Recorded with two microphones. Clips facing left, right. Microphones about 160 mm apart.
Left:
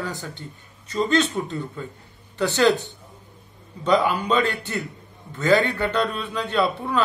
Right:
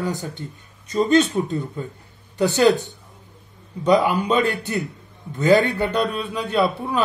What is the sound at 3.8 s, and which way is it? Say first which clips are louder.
Speech: right 3 dB; 15° right (ahead or behind).